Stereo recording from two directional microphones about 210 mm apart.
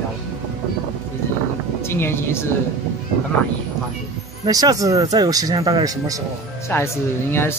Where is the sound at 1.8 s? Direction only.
10° left (ahead or behind).